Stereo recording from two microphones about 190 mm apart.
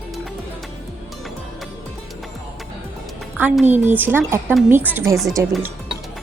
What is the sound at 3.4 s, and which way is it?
A woman's voice, 10° right (ahead or behind).